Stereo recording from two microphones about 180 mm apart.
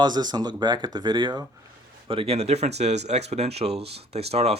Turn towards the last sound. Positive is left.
turn(degrees=-35)  # may be behind; listen again after turning